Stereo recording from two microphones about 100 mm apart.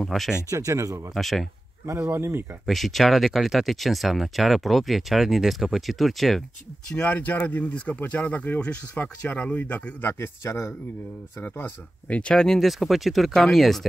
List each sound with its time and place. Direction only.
0.0 s speech: centre (ahead or behind)
0.5 s speech: 35° right (ahead or behind)
1.1 s speech: centre (ahead or behind)
2.0 s speech: 25° right (ahead or behind)
2.6 s speech: centre (ahead or behind)
6.9 s speech: 15° left (ahead or behind); by 13.8 s centre (ahead or behind)